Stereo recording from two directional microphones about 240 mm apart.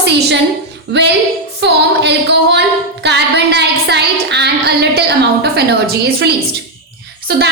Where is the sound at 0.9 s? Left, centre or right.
Right.